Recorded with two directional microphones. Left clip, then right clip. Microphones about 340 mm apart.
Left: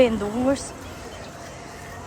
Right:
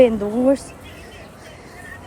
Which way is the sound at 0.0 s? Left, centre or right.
Centre.